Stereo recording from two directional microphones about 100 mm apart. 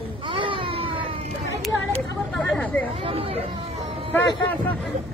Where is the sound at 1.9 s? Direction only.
10° left (ahead or behind).